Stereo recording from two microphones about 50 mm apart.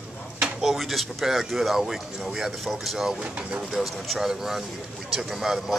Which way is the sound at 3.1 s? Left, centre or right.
Centre.